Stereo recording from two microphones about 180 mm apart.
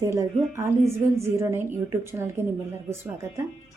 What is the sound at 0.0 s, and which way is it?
Speech, 15° right (ahead or behind).